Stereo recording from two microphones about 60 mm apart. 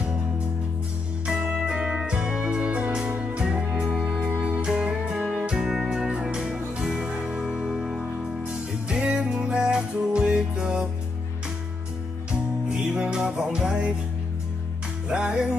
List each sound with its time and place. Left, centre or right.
1.2 s music: centre
12.3 s music: centre
15.0 s music: centre